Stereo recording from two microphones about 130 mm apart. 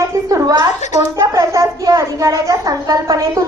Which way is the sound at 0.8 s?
65° left (ahead or behind).